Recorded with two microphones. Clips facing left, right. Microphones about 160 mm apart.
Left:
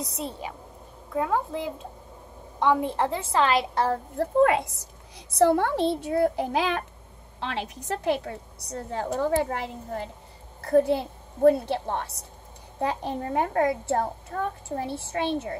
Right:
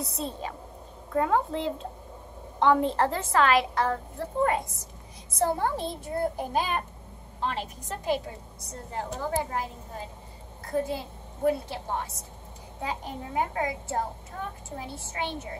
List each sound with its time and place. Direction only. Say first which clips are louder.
0.0 s a woman's voice: even; 15° left (ahead or behind)
3.3 s a woman's voice: even; 30° left (ahead or behind)
4.2 s a woman's voice: left 7 dB; 75° left (ahead or behind)
13.2 s a woman's voice: left 5 dB; 65° left (ahead or behind)